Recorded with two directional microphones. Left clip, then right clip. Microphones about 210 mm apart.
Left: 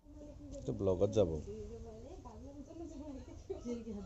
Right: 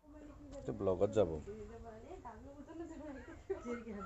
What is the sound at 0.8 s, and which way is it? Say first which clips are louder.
Speech: left 1 dB; 5° right (ahead or behind).